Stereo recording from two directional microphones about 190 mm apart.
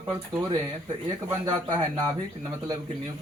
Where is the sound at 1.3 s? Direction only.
20° right (ahead or behind).